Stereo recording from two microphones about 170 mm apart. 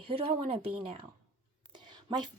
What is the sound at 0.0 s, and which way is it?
Speech, 35° right (ahead or behind).